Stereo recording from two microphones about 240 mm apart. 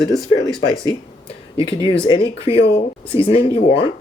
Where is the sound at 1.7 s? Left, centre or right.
Left.